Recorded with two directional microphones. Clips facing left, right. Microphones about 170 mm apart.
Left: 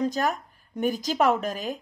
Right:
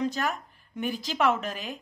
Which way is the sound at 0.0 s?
40° left (ahead or behind).